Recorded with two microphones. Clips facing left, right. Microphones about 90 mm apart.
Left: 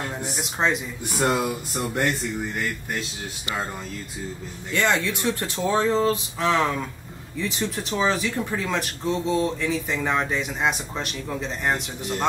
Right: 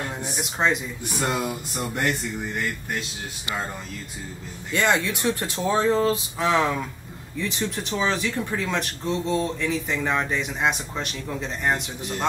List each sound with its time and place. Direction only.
0.4 s speech: centre (ahead or behind)
1.0 s speech: 20° left (ahead or behind)
2.0 s speech: centre (ahead or behind)
4.7 s speech: 20° right (ahead or behind); by 12.3 s centre (ahead or behind)